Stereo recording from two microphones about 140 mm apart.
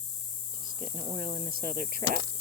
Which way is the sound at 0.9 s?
80° right.